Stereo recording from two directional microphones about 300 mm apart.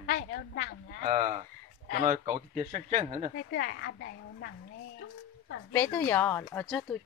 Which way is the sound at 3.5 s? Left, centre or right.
Left.